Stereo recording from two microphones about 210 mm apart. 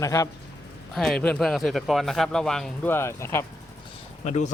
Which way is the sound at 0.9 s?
Centre (ahead or behind).